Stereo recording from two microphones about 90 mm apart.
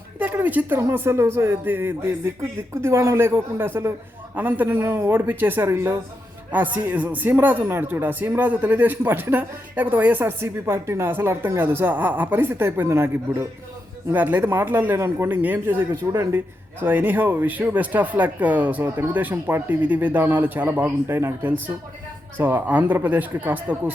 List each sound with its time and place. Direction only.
0.2 s speech: 20° right (ahead or behind)
10.4 s speech: 30° right (ahead or behind)
16.8 s speech: 20° right (ahead or behind)